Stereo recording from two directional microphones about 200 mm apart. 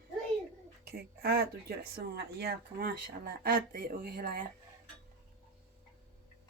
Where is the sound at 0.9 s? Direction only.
50° right (ahead or behind).